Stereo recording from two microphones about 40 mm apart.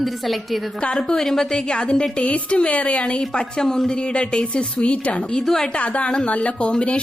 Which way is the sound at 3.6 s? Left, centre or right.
Centre.